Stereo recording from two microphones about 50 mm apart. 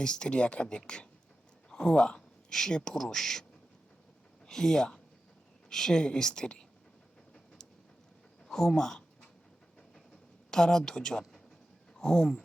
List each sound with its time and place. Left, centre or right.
0.0 s speech: centre
2.5 s speech: centre
4.4 s speech: centre
7.3 s train: centre
8.4 s a sound: centre
10.5 s speech: centre